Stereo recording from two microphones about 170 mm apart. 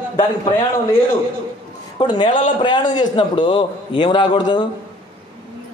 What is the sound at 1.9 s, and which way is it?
A man's voice, 25° left (ahead or behind).